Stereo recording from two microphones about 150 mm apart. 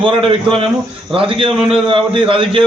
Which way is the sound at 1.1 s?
35° right (ahead or behind).